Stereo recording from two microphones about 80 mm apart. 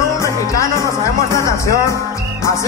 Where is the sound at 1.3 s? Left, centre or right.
Left.